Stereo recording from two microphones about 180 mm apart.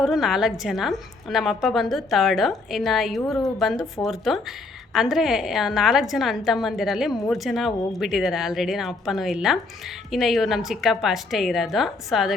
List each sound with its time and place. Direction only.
0.0 s a woman's voice: centre (ahead or behind)